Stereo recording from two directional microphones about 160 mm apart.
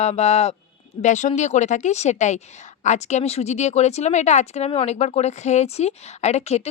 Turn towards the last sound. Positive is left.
turn(degrees=40)  # may be behind; listen again after turning